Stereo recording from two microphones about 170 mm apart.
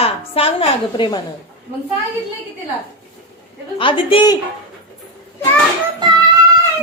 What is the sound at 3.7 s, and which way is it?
Speech, 30° left (ahead or behind).